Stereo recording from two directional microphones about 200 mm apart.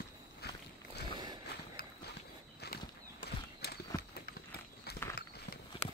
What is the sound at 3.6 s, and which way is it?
Horse, 50° left (ahead or behind).